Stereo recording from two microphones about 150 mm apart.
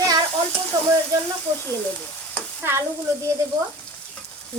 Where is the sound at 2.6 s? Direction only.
15° right (ahead or behind).